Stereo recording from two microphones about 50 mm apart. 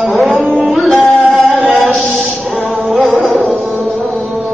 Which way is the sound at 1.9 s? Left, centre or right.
Centre.